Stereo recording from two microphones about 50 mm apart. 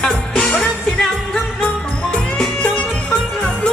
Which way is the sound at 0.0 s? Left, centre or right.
Centre.